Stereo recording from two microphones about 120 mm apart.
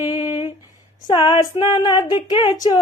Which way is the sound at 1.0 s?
45° left (ahead or behind).